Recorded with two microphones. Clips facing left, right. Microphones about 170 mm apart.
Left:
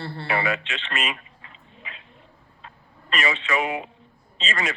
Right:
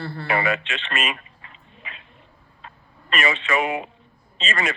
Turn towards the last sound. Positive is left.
turn(degrees=-55)  # may be behind; listen again after turning